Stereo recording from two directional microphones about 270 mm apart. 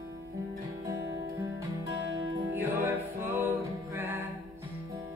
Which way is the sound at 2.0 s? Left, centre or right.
Right.